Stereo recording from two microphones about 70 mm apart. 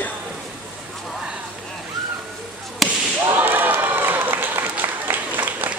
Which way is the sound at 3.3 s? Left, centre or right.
Right.